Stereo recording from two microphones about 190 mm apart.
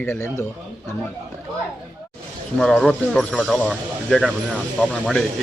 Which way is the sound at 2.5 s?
Centre (ahead or behind).